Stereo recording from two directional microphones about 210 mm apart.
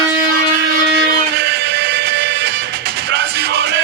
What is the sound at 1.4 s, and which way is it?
Music, 50° right (ahead or behind).